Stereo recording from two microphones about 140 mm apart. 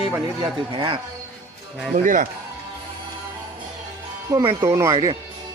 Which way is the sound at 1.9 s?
70° right (ahead or behind).